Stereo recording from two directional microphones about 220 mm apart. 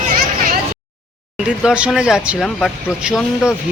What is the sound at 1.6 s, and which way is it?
Speech, 5° right (ahead or behind).